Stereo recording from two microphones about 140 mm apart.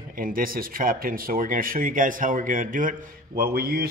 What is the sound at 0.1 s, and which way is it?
Speech, 90° right.